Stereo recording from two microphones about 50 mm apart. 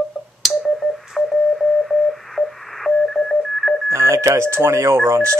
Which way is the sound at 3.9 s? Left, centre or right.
Right.